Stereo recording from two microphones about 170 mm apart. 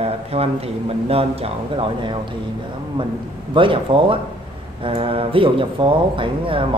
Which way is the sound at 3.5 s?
30° right (ahead or behind).